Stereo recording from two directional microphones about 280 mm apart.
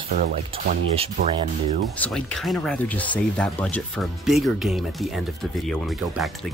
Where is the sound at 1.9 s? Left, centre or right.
Centre.